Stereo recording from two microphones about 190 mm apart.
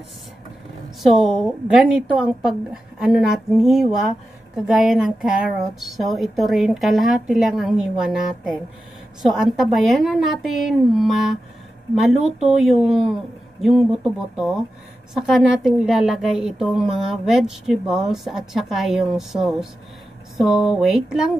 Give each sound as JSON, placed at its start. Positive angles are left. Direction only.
{"t": 1.0, "sound": "a woman's voice", "side_deg": 0}
{"t": 9.2, "sound": "a woman's voice", "side_deg": 0}
{"t": 12.2, "sound": "speech", "side_deg": -35}
{"t": 12.4, "sound": "a woman's voice", "side_deg": 0}